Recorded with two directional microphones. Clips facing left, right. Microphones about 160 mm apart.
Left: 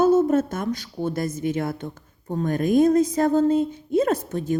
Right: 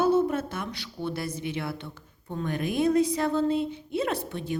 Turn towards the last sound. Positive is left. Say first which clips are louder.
# left 7 dB
turn(degrees=45)  # may be behind; listen again after turning